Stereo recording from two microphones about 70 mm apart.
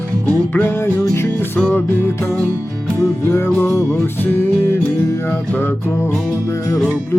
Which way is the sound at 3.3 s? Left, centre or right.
Left.